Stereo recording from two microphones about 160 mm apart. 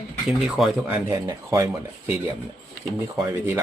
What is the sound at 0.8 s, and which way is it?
Speech, 20° right (ahead or behind).